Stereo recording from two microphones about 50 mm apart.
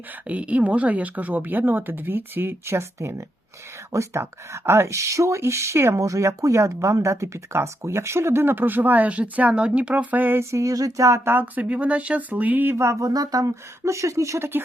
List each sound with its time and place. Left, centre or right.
0.3 s speech: right
3.9 s speech: right
10.5 s speech: right
11.6 s speech: right
12.7 s speech: right
13.8 s speech: right